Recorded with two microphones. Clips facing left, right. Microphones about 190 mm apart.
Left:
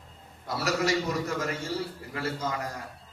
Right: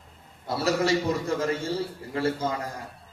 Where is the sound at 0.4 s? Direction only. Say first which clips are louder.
Right 3 dB; 30° right (ahead or behind).